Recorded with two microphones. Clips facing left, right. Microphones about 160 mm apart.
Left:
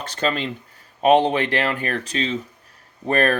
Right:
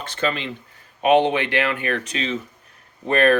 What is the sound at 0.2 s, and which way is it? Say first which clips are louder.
Speech: left 1 dB; 40° left (ahead or behind).